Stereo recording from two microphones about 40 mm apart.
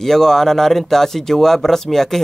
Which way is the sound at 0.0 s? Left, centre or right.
Centre.